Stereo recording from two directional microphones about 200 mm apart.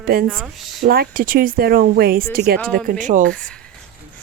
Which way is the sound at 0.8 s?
50° right (ahead or behind).